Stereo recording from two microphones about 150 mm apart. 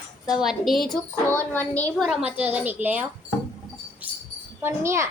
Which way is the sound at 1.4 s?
10° left (ahead or behind).